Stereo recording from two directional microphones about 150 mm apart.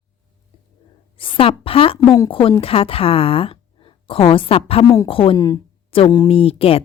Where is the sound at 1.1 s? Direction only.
35° left (ahead or behind).